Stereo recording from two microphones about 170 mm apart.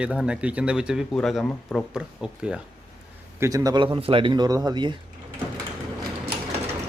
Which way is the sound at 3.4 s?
20° right (ahead or behind).